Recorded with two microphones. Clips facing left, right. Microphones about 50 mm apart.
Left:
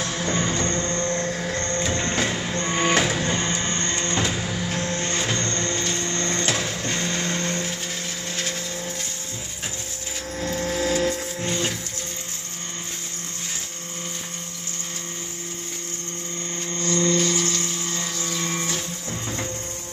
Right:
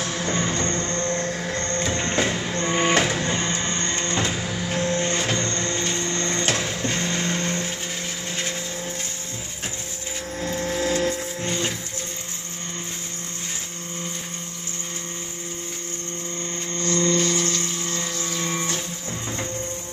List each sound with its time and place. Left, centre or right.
0.0 s music: centre
3.0 s printer: centre
4.0 s vehicle: centre
4.7 s printer: centre
6.5 s music: centre
6.8 s vehicle: centre
10.3 s a sound: centre
10.6 s a sound: centre
16.8 s a sound: centre
17.1 s helicopter: centre
18.2 s music: centre